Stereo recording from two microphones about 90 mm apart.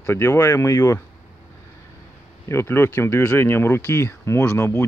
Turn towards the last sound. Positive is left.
turn(degrees=30)  # may be behind; listen again after turning